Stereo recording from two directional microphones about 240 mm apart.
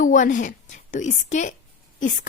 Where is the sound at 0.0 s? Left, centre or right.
Left.